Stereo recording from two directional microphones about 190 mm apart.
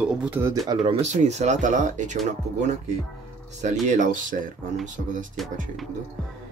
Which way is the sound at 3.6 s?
40° right (ahead or behind).